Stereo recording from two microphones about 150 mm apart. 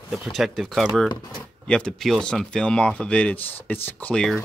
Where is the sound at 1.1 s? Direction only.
25° left (ahead or behind).